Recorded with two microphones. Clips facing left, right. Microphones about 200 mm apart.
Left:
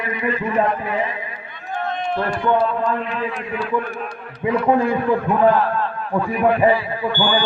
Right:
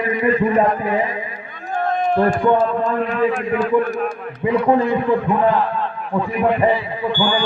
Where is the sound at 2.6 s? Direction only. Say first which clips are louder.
Right 2 dB; 45° right (ahead or behind).